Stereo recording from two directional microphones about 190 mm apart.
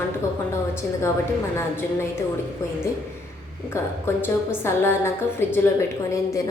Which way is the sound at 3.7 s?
15° left (ahead or behind).